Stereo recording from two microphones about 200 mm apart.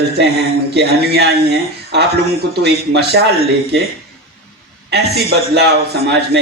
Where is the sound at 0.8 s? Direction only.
55° right (ahead or behind).